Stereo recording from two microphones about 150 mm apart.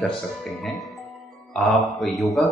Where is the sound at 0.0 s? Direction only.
Centre (ahead or behind).